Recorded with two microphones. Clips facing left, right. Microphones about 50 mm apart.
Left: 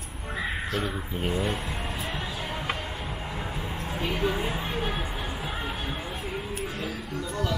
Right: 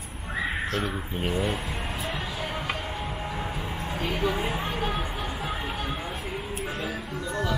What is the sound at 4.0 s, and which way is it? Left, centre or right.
Speech, centre.